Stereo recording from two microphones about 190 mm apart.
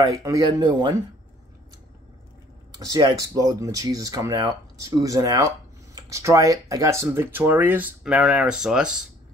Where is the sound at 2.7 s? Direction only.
20° right (ahead or behind).